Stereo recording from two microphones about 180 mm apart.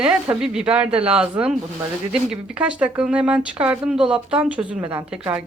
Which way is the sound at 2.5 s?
5° right (ahead or behind).